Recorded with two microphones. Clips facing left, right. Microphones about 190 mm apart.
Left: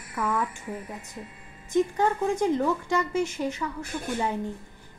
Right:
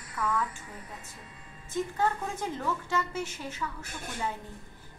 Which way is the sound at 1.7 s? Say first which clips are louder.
Left 6 dB; 15° left (ahead or behind).